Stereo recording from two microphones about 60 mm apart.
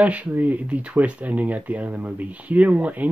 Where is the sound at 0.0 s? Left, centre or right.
Right.